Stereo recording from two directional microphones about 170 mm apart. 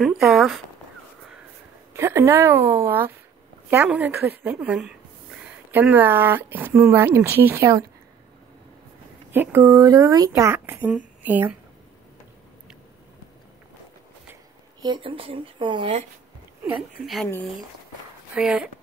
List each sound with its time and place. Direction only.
0.0 s speech: centre (ahead or behind)
2.0 s speech: 15° right (ahead or behind)
9.3 s speech: 10° right (ahead or behind)
14.8 s speech: 30° right (ahead or behind)
17.0 s speech: centre (ahead or behind)
18.3 s speech: 5° right (ahead or behind)